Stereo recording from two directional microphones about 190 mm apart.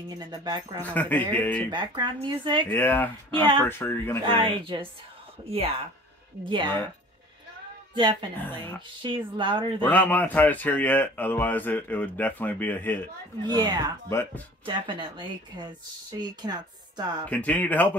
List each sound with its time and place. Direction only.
0.3 s speech: 20° right (ahead or behind)
0.8 s speech: 10° left (ahead or behind)
1.7 s speech: 25° right (ahead or behind)
2.7 s speech: 10° left (ahead or behind)
4.3 s speech: 25° right (ahead or behind)
6.4 s speech: 25° right (ahead or behind)
7.9 s a woman's voice: 25° right (ahead or behind)
8.4 s speech: 10° left (ahead or behind)
9.0 s speech: 25° right (ahead or behind)
9.8 s speech: 10° left (ahead or behind)
13.5 s speech: 20° right (ahead or behind)
14.0 s speech: 15° left (ahead or behind)
14.7 s speech: 25° right (ahead or behind)
17.3 s speech: 5° left (ahead or behind)